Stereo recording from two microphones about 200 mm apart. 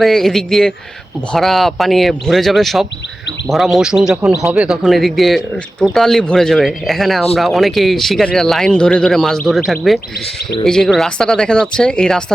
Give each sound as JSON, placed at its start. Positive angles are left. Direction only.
{"t": 0.0, "sound": "a man's voice", "side_deg": 0}